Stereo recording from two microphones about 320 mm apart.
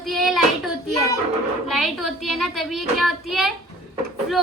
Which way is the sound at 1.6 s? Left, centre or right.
Centre.